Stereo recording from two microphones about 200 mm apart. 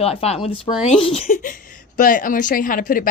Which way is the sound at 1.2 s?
40° left (ahead or behind).